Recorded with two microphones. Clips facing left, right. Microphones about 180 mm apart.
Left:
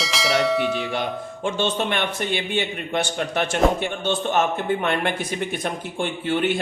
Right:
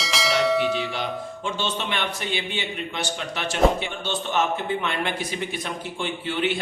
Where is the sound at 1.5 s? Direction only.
50° left (ahead or behind).